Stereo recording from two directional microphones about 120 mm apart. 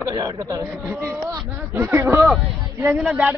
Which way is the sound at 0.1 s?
30° right (ahead or behind).